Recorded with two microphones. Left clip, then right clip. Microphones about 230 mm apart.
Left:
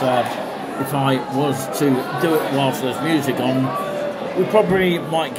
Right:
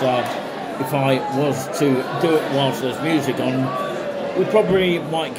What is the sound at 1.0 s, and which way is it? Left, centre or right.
Speech, centre.